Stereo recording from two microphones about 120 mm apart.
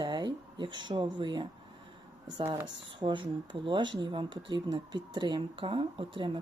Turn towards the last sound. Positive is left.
turn(degrees=-45)  # may be behind; listen again after turning